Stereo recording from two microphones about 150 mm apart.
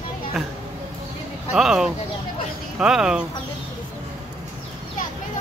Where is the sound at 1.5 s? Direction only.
5° right (ahead or behind).